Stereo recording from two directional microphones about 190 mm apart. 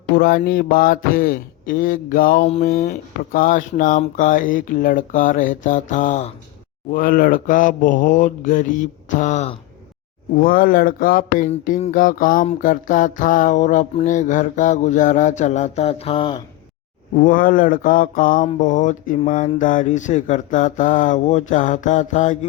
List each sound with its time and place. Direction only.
0.1 s speech: 55° left (ahead or behind); by 9.6 s 35° left (ahead or behind)
10.3 s speech: 50° left (ahead or behind)
12.6 s mantra: 45° left (ahead or behind); by 16.4 s 25° left (ahead or behind)
17.2 s speech: 45° left (ahead or behind)
18.6 s mantra: 40° left (ahead or behind)